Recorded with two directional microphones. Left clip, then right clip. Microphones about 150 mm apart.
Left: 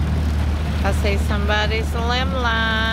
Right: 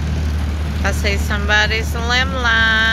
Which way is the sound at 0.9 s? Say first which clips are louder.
Right 3 dB; 5° left (ahead or behind).